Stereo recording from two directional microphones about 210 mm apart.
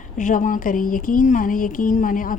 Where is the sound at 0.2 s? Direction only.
40° left (ahead or behind).